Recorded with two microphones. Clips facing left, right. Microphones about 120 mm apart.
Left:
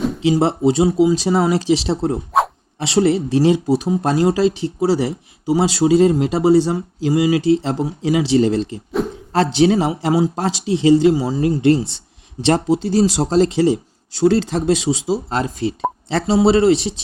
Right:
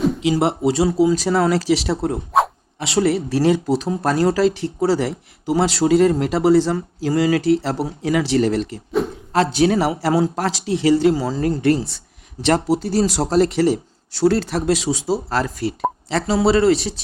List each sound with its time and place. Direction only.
0.2 s speech: 30° left (ahead or behind)
9.0 s a sound: centre (ahead or behind)
9.3 s speech: 30° left (ahead or behind)